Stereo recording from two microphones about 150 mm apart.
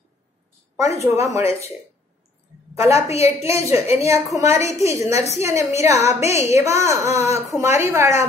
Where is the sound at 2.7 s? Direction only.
20° right (ahead or behind).